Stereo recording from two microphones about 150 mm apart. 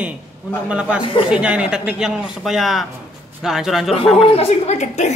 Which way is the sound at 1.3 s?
5° right (ahead or behind).